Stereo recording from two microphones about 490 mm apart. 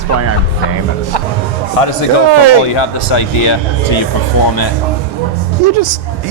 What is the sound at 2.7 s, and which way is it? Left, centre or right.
Speech, left.